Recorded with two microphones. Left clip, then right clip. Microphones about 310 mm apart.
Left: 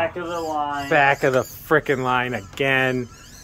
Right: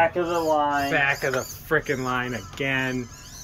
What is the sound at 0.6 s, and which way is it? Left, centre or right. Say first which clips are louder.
Speech: right 2 dB; right.